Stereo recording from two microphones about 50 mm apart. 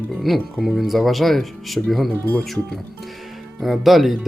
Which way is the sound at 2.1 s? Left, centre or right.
Left.